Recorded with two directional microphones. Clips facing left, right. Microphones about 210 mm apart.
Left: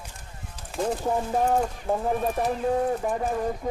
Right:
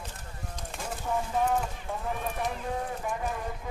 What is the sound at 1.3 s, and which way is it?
Speech, 40° left (ahead or behind).